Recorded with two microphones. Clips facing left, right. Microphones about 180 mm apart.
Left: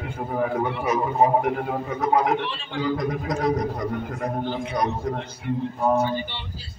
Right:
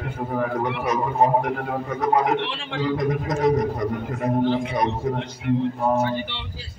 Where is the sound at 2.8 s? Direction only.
Centre (ahead or behind).